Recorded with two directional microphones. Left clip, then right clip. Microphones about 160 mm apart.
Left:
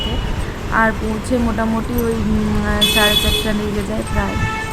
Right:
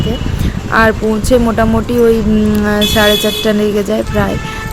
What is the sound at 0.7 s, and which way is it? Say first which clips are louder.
Speech: right 6 dB; 40° right (ahead or behind).